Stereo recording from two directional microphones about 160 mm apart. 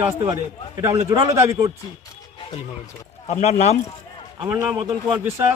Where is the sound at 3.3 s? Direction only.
45° left (ahead or behind).